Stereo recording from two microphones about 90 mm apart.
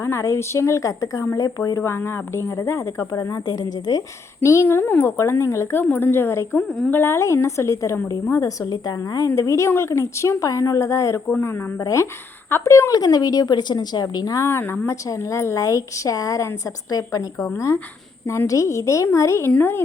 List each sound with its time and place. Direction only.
0.0 s speech: 30° left (ahead or behind); by 4.0 s 45° left (ahead or behind)
4.4 s speech: 30° left (ahead or behind)
5.8 s speech: 20° left (ahead or behind)
8.6 s speech: 50° left (ahead or behind)
11.3 s speech: 25° left (ahead or behind)
11.8 s speech: 40° left (ahead or behind)
13.0 s speech: 45° left (ahead or behind)
14.4 s speech: 25° left (ahead or behind)
18.3 s speech: 35° left (ahead or behind)
19.5 s speech: 20° left (ahead or behind)